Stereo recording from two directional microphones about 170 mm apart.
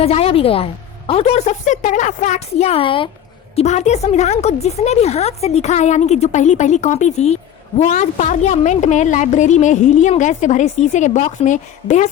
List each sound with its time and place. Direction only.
0.0 s a woman's voice: 35° left (ahead or behind)